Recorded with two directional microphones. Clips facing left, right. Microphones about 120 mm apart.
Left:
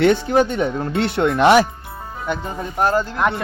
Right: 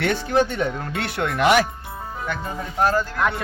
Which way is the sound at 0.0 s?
20° left (ahead or behind).